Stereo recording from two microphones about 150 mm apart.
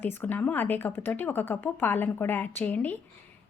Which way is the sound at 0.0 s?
10° left (ahead or behind).